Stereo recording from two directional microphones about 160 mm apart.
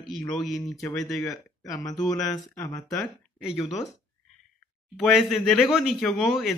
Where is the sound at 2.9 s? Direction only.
Centre (ahead or behind).